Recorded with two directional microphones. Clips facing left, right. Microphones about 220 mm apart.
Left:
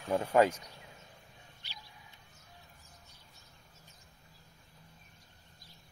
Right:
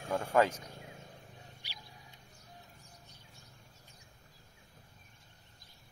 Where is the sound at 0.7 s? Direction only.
45° right (ahead or behind).